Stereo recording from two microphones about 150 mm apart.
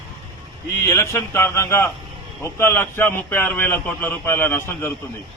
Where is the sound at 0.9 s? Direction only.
20° left (ahead or behind).